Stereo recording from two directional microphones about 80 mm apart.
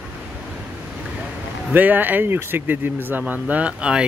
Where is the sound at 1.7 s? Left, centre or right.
Right.